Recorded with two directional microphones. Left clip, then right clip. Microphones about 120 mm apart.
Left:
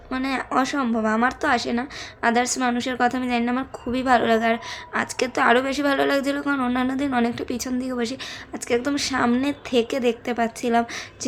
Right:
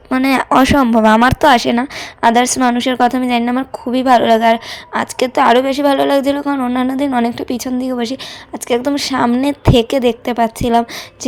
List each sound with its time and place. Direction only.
0.1 s speech: 90° right
2.2 s a woman's voice: 65° right (ahead or behind); by 11.3 s 45° right (ahead or behind)